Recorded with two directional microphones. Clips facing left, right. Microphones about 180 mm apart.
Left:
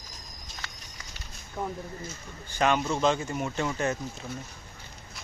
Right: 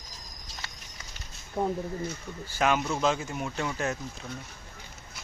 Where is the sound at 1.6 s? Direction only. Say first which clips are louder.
Right 5 dB; 30° right (ahead or behind).